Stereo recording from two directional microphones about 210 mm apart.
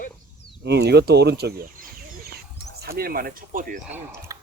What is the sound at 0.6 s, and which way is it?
Speech, 50° right (ahead or behind).